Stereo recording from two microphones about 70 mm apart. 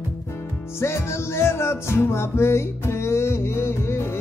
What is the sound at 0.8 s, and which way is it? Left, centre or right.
Music, left.